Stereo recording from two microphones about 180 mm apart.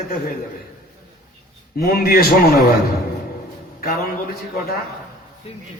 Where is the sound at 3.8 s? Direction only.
55° left (ahead or behind).